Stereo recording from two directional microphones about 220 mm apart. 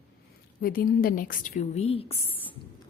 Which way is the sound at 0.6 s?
40° left (ahead or behind).